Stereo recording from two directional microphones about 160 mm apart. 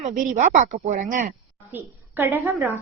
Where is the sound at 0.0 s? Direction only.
50° right (ahead or behind).